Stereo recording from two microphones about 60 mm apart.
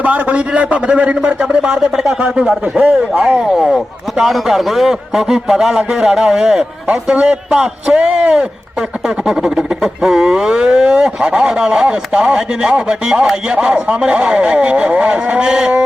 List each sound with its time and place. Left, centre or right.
0.0 s a man's voice: right
2.4 s a man's voice: centre
6.8 s a man's voice: right